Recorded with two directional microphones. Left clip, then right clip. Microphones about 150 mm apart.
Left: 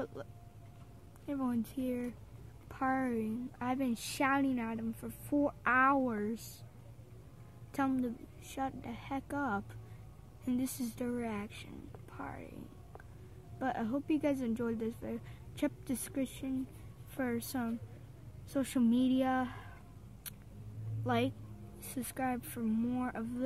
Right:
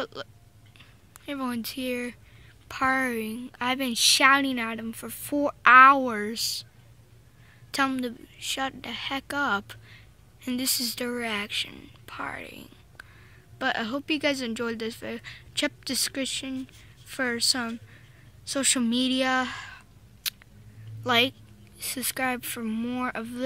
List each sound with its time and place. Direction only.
0.0 s a woman's voice: 25° right (ahead or behind)
7.7 s speech: 25° right (ahead or behind)
13.6 s speech: 25° right (ahead or behind)
21.0 s speech: 30° right (ahead or behind)